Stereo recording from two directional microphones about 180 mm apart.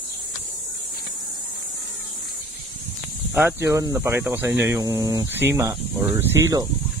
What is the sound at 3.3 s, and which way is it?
Speech, 10° right (ahead or behind).